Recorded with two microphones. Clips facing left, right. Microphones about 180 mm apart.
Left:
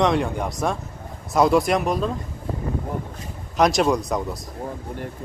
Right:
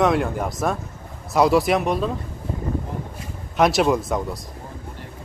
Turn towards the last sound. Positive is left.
turn(degrees=0)  # may be behind; listen again after turning